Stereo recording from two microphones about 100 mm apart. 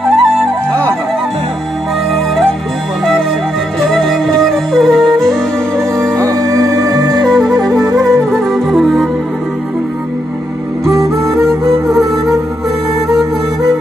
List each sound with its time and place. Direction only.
0.0 s music: centre (ahead or behind)
3.9 s music: 5° left (ahead or behind)
6.1 s music: 35° right (ahead or behind)
7.2 s music: centre (ahead or behind)
7.7 s music: 35° right (ahead or behind)
8.5 s music: centre (ahead or behind)
10.9 s music: 30° right (ahead or behind)